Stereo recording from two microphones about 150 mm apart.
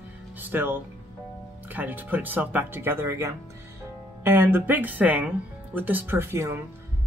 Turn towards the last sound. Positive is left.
turn(degrees=-15)  # may be behind; listen again after turning